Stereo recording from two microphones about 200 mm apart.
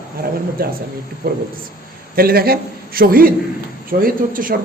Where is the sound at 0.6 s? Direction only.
50° right (ahead or behind).